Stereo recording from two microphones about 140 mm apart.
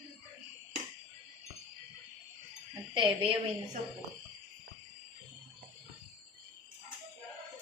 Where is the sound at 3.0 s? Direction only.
35° right (ahead or behind).